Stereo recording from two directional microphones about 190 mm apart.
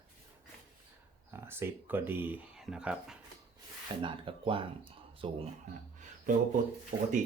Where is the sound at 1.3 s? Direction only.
10° right (ahead or behind).